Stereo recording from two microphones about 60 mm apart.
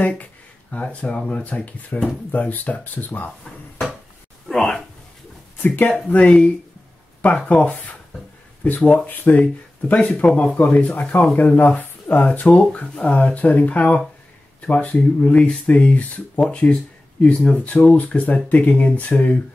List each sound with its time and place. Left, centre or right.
0.0 s speech: left
4.5 s a sound: centre
6.0 s speech: left